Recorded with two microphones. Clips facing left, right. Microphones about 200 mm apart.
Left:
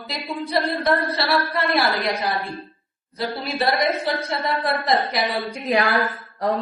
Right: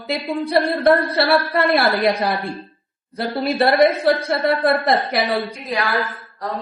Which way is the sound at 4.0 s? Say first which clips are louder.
Right 7 dB; 60° right (ahead or behind).